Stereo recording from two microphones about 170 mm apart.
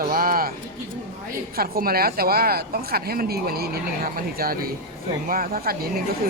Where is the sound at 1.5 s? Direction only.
60° right (ahead or behind).